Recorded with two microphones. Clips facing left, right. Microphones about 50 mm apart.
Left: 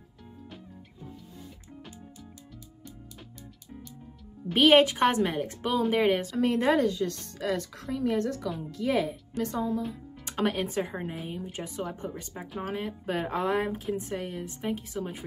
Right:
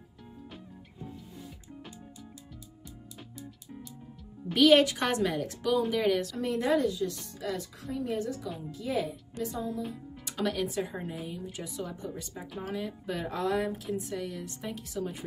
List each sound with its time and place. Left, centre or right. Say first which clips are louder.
4.6 s a woman's voice: left 2 dB; left
10.2 s speech: left 2 dB; left
14.6 s a woman's voice: left 3 dB; left